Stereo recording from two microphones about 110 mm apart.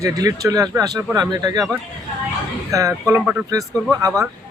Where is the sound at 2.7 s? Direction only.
30° right (ahead or behind).